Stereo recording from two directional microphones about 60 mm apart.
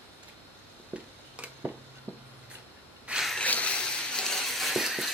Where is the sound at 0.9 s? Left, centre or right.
Centre.